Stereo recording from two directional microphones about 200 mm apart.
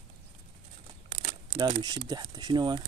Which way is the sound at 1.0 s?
25° right (ahead or behind).